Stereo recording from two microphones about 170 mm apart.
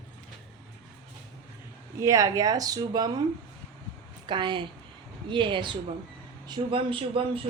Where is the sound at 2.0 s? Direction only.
20° right (ahead or behind).